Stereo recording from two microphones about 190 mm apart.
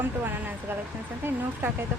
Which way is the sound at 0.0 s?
10° right (ahead or behind).